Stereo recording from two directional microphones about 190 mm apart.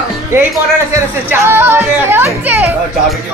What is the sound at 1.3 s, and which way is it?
Speech, 15° right (ahead or behind).